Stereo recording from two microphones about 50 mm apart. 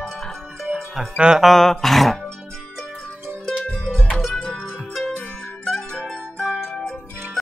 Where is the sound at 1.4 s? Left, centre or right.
Centre.